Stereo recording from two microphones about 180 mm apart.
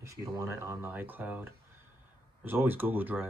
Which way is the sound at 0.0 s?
15° right (ahead or behind).